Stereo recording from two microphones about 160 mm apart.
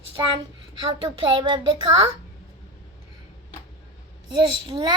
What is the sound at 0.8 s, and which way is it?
A child's voice, 30° right (ahead or behind).